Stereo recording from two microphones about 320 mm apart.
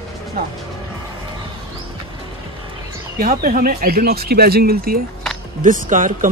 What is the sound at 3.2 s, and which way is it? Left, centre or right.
Speech, right.